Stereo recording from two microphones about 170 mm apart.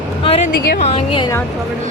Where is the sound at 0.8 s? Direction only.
35° left (ahead or behind).